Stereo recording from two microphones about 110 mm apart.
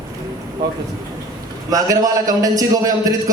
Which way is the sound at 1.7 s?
35° right (ahead or behind).